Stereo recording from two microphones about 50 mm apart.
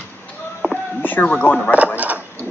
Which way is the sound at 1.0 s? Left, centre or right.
Left.